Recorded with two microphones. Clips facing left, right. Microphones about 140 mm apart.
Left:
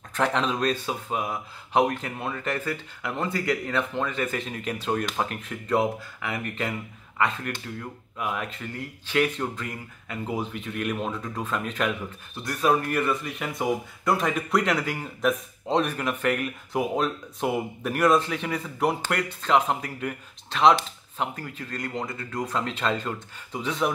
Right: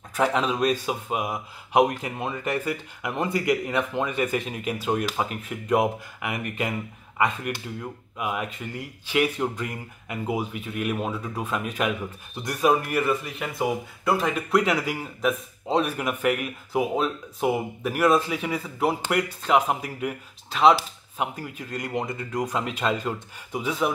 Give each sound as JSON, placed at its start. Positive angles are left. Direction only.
{"t": 0.1, "sound": "speech", "side_deg": -5}